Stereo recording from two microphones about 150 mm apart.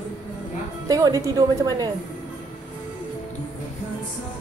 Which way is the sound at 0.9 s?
20° right (ahead or behind).